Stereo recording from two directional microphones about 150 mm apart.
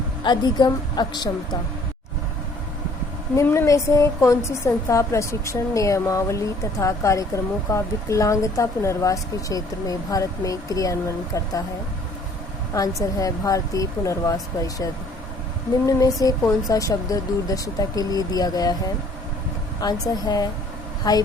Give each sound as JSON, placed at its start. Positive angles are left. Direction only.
{"t": 0.2, "sound": "a woman's voice", "side_deg": 30}
{"t": 3.3, "sound": "a woman's voice", "side_deg": 15}
{"t": 12.7, "sound": "a woman's voice", "side_deg": 25}
{"t": 15.9, "sound": "a woman's voice", "side_deg": 20}
{"t": 19.8, "sound": "a woman's voice", "side_deg": 25}